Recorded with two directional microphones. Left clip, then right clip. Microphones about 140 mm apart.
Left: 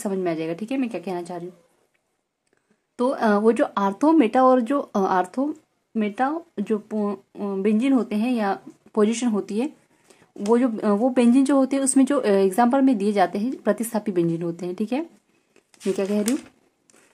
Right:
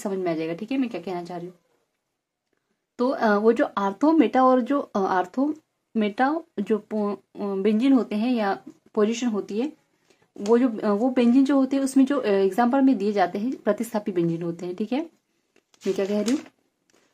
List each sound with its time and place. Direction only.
0.0 s speech: 20° left (ahead or behind)
3.0 s speech: 20° left (ahead or behind)
5.4 s speech: centre (ahead or behind)
8.9 s speech: 25° left (ahead or behind)
10.3 s speech: 15° left (ahead or behind)